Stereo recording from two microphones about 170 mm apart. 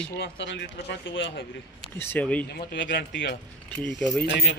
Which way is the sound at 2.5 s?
85° left.